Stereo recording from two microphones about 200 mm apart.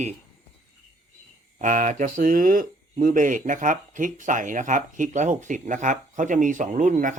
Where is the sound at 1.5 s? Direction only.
40° right (ahead or behind).